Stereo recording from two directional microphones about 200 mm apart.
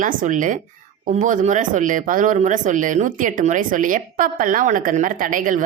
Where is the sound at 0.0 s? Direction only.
40° right (ahead or behind).